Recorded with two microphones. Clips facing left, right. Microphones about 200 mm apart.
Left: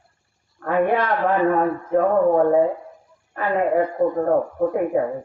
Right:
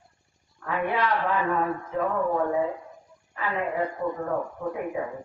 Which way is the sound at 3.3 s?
50° left (ahead or behind).